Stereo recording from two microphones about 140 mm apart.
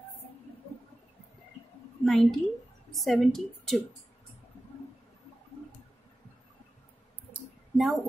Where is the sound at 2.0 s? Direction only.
Centre (ahead or behind).